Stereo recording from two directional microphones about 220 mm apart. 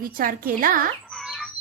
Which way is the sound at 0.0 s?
40° right (ahead or behind).